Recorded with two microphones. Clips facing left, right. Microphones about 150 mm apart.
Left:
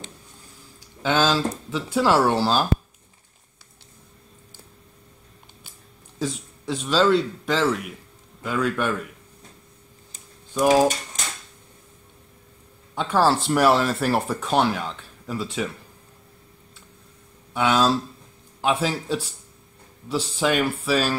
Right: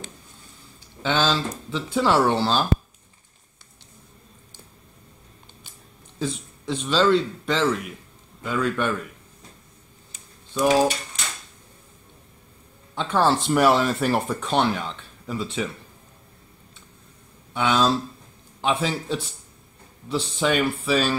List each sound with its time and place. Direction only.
1.0 s a man's voice: 5° left (ahead or behind)
6.1 s a man's voice: 5° left (ahead or behind)
11.2 s a sound: 45° left (ahead or behind)
12.9 s speech: 5° left (ahead or behind)
17.6 s a man's voice: 5° left (ahead or behind)